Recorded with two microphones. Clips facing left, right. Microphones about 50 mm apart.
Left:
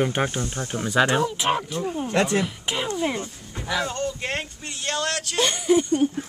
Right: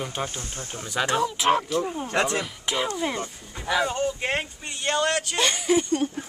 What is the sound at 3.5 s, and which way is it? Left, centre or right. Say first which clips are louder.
Speech: right 2 dB; centre.